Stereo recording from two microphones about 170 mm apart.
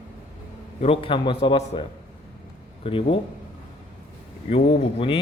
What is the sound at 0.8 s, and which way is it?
A man's voice, 30° left (ahead or behind).